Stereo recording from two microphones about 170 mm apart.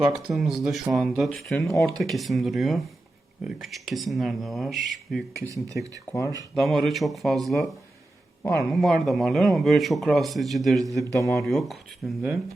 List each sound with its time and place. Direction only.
0.0 s a man's voice: 5° right (ahead or behind)
6.1 s speech: 20° left (ahead or behind)
6.5 s a man's voice: centre (ahead or behind)
11.0 s speech: 20° left (ahead or behind)
11.4 s a man's voice: centre (ahead or behind)